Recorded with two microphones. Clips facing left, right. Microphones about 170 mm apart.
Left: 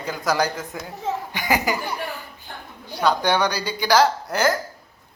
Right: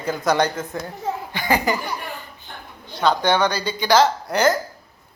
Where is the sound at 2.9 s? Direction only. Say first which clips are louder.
Right 1 dB; 10° left (ahead or behind).